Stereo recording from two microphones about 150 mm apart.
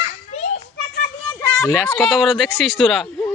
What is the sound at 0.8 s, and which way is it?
Children playing, 90° left.